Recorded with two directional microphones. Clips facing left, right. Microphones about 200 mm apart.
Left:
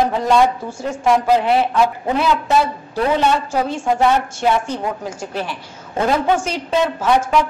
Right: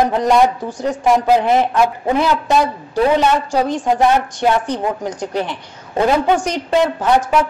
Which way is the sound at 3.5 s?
15° right (ahead or behind).